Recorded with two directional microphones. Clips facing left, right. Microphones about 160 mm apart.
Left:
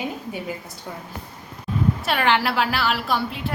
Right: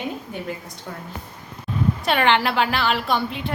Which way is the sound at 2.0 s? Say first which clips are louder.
Right 4 dB; 5° left (ahead or behind).